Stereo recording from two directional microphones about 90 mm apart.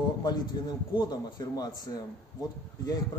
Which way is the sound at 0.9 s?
50° left (ahead or behind).